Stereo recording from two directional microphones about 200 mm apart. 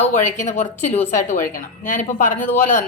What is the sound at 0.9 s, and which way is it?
Speech, 10° left (ahead or behind).